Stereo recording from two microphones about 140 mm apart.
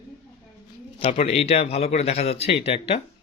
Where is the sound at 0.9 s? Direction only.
45° left (ahead or behind).